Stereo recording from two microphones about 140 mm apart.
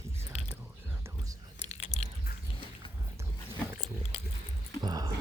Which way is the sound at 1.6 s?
50° left (ahead or behind).